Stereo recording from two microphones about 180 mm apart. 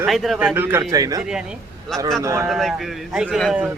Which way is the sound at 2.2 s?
15° right (ahead or behind).